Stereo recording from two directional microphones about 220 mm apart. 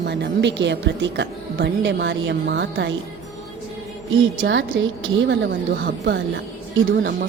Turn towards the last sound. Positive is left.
turn(degrees=-45)  # may be behind; listen again after turning